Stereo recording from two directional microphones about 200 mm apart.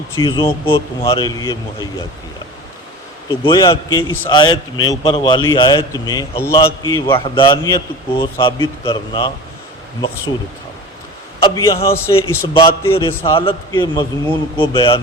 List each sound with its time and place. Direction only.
0.2 s a man's voice: 25° left (ahead or behind)
3.2 s a man's voice: 25° left (ahead or behind)
11.4 s speech: 20° left (ahead or behind)
13.3 s a man's voice: 25° left (ahead or behind)
13.7 s speech: 15° left (ahead or behind)
14.6 s a man's voice: 25° left (ahead or behind)